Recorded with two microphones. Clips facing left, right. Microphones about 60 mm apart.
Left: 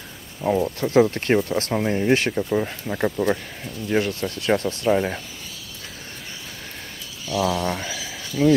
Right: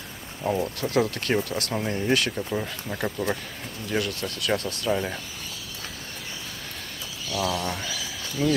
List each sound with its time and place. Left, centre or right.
0.4 s speech: centre
0.7 s speech: left
2.3 s speech: centre
7.3 s speech: centre
7.6 s speech: left